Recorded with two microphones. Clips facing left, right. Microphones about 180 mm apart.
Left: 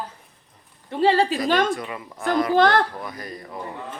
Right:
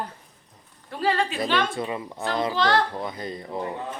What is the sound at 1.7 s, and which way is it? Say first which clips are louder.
Speech: even; 25° right (ahead or behind).